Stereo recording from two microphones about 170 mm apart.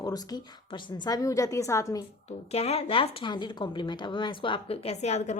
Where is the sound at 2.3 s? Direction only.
35° left (ahead or behind).